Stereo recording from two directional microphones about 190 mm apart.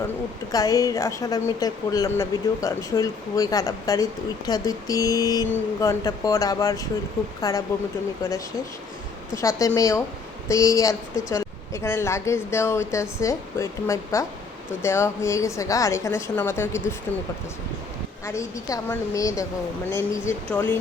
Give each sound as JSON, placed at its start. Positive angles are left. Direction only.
{"t": 0.5, "sound": "a woman's voice", "side_deg": 20}
{"t": 9.3, "sound": "a woman's voice", "side_deg": 15}
{"t": 18.3, "sound": "a woman's voice", "side_deg": 15}